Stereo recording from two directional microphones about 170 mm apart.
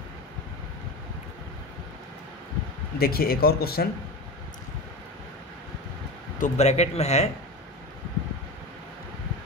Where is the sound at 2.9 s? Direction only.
65° left (ahead or behind).